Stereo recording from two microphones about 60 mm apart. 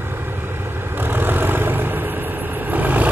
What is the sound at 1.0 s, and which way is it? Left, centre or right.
Vehicle, right.